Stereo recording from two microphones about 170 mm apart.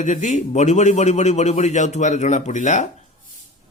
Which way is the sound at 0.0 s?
45° left (ahead or behind).